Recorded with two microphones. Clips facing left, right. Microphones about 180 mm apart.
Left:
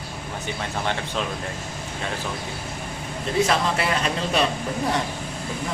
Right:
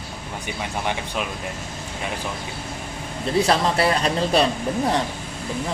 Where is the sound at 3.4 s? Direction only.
35° right (ahead or behind).